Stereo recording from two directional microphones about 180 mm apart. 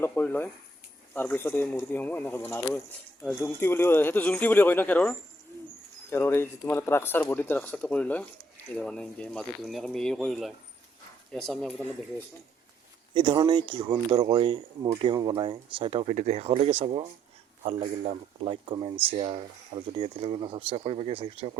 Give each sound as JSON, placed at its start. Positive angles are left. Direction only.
{"t": 0.0, "sound": "speech", "side_deg": 10}
{"t": 13.1, "sound": "speech", "side_deg": -25}